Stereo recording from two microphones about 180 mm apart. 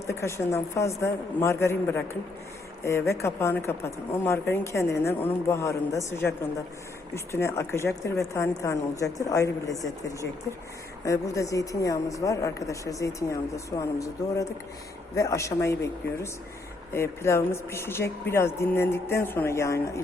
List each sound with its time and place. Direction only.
0.1 s a woman's voice: 15° left (ahead or behind)